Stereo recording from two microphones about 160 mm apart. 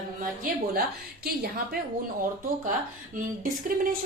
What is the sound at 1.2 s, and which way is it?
Speech, 75° right (ahead or behind).